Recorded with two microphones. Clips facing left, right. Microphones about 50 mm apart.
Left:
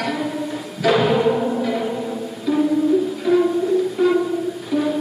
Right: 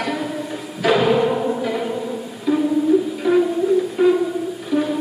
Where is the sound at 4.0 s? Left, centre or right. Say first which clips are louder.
Right 2 dB; centre.